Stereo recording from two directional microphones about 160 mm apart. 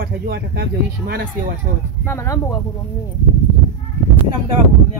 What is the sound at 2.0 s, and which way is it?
Speech, 15° left (ahead or behind).